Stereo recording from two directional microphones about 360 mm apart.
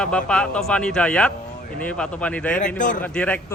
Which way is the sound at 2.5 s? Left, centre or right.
Left.